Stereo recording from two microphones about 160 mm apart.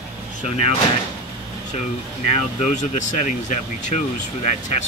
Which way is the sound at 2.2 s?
45° left (ahead or behind).